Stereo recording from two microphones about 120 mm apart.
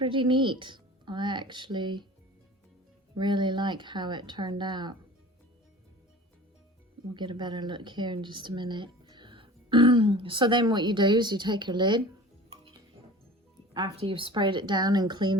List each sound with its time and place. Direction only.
0.0 s speech: 40° right (ahead or behind)
3.2 s speech: 40° right (ahead or behind)
7.1 s speech: 40° right (ahead or behind)
13.9 s speech: 50° right (ahead or behind)